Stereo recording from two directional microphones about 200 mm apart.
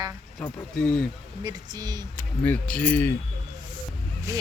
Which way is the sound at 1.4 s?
20° right (ahead or behind).